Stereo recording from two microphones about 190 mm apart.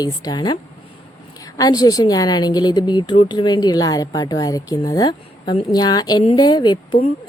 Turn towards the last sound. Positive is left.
turn(degrees=20)  # may be behind; listen again after turning